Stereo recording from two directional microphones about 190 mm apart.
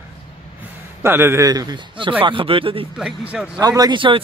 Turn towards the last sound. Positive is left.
turn(degrees=-25)  # may be behind; listen again after turning